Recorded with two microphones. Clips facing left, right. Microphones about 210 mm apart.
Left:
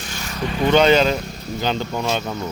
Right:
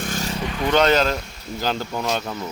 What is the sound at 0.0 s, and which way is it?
Vehicle, 50° right (ahead or behind).